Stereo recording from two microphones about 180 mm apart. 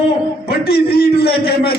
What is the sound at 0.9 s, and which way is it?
Speech, 60° left (ahead or behind).